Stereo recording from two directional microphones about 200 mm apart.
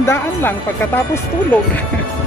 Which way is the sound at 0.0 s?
10° left (ahead or behind).